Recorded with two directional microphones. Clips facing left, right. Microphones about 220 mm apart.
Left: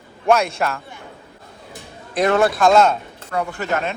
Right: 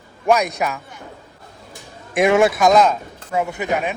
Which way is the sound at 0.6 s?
10° right (ahead or behind).